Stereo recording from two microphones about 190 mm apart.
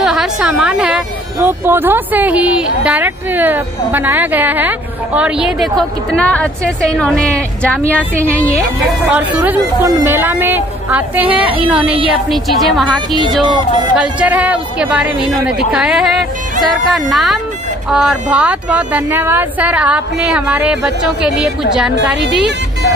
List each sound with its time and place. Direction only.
0.0 s speech: centre (ahead or behind)
9.1 s speech: 10° right (ahead or behind)
13.4 s speech: 25° right (ahead or behind)
13.9 s speech: 5° right (ahead or behind)
21.9 s a woman's voice: 65° right (ahead or behind)